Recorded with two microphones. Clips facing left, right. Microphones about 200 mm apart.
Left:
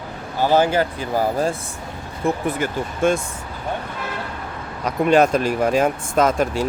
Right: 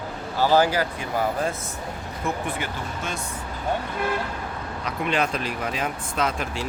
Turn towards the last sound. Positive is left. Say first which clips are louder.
# left 9 dB
turn(degrees=45)  # may be behind; listen again after turning